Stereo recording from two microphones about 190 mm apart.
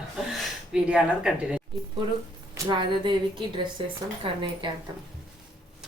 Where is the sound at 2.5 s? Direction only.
25° right (ahead or behind).